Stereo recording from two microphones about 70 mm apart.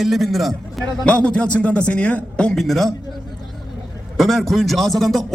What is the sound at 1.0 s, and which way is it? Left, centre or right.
A man's voice, centre.